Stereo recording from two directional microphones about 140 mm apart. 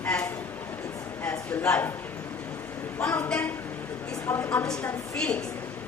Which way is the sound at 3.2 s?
10° left (ahead or behind).